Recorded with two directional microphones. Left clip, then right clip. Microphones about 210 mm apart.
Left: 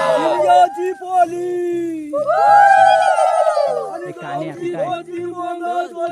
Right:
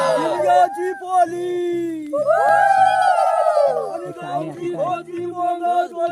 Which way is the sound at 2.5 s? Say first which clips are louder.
Left 8 dB; 50° right (ahead or behind).